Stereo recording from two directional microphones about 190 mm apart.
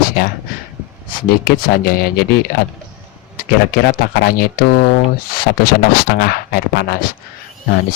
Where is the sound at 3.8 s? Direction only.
50° left (ahead or behind).